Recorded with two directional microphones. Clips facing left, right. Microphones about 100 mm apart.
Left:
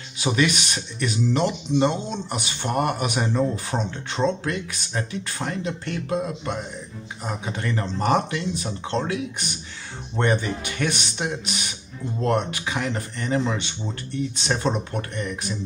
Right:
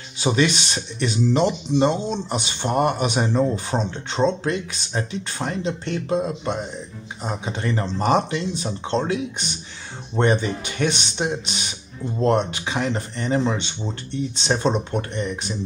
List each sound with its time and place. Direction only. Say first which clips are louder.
0.2 s speech: right 2 dB; 25° right (ahead or behind)